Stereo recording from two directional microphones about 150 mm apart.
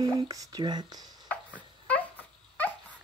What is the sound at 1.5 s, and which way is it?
Dog, 10° left (ahead or behind).